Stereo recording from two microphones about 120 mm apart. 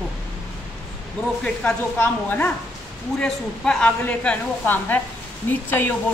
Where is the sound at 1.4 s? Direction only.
10° left (ahead or behind).